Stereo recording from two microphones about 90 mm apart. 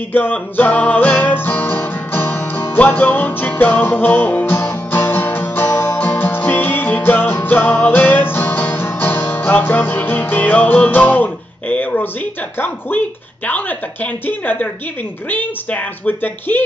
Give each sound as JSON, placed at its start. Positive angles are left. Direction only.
{"t": 0.1, "sound": "music", "side_deg": 20}
{"t": 11.7, "sound": "speech", "side_deg": 15}
{"t": 14.2, "sound": "speech", "side_deg": 20}